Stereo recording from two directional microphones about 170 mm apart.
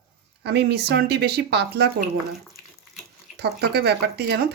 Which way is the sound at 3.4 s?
75° right (ahead or behind).